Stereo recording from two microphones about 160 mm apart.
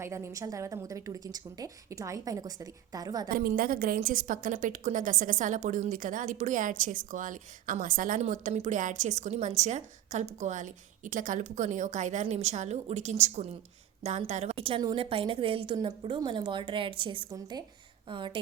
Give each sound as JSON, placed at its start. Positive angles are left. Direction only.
{"t": 0.0, "sound": "a woman's voice", "side_deg": -15}
{"t": 3.2, "sound": "a woman's voice", "side_deg": -65}